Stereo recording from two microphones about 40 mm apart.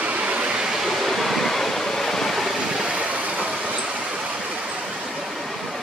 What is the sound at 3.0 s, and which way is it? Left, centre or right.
Vehicle, right.